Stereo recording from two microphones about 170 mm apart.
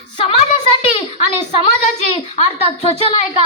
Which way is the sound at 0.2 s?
35° left (ahead or behind).